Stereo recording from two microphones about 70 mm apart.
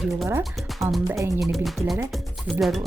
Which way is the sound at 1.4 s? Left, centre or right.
Centre.